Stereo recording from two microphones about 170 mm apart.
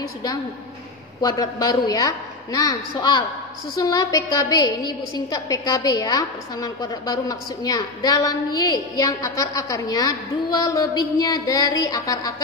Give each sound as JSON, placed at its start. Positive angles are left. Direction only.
{"t": 0.0, "sound": "a woman's voice", "side_deg": 20}